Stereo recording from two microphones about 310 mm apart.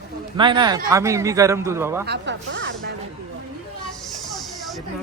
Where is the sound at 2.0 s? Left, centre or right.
Right.